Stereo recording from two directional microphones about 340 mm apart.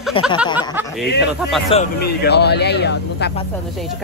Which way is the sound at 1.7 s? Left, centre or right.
Left.